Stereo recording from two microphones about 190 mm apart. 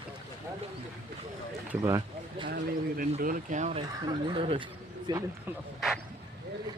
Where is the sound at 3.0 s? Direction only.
45° right (ahead or behind); by 5.2 s 20° right (ahead or behind).